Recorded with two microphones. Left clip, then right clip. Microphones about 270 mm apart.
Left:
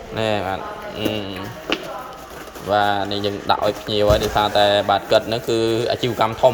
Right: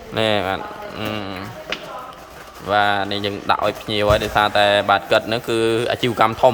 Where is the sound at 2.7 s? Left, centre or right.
Centre.